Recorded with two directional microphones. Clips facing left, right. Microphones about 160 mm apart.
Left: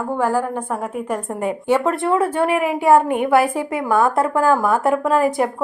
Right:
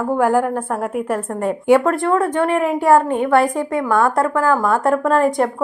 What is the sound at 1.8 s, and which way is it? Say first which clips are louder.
Speech: right 1 dB; 5° left (ahead or behind).